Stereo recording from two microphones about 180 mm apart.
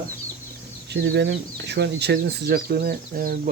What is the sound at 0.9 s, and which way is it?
Speech, 80° right.